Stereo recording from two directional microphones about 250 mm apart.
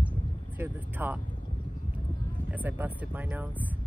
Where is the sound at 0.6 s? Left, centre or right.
Centre.